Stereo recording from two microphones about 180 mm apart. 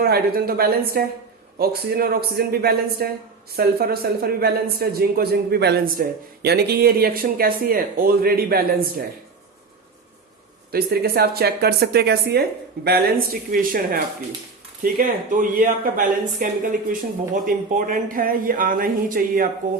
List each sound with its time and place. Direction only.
0.0 s speech: 60° right (ahead or behind)
10.7 s speech: 60° right (ahead or behind)